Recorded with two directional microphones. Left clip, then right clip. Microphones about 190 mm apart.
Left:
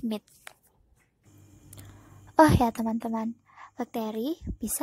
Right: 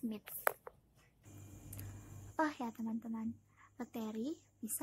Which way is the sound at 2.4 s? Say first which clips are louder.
Left 18 dB; 40° left (ahead or behind).